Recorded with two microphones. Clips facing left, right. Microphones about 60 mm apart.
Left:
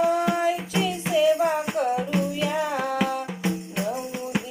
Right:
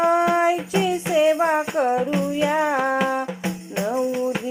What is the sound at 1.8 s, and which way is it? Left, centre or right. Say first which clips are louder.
Music: right 4 dB; right.